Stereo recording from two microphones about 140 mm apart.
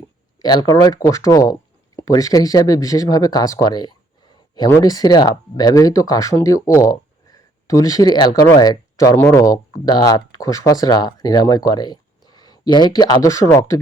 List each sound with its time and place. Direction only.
0.3 s speech: 30° left (ahead or behind)